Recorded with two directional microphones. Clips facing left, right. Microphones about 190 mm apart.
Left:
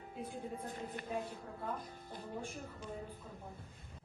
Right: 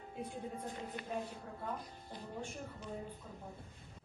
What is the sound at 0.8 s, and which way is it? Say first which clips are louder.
Speech: even; 50° left (ahead or behind).